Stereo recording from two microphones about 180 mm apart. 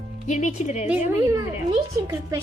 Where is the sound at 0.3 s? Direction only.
40° left (ahead or behind).